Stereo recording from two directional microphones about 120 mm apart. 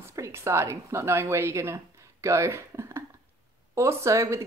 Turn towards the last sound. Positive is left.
turn(degrees=-25)  # may be behind; listen again after turning